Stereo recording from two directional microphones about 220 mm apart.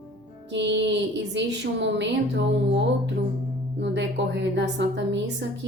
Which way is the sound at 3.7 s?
55° right (ahead or behind).